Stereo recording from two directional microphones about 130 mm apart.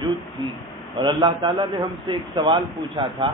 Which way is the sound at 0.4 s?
40° right (ahead or behind).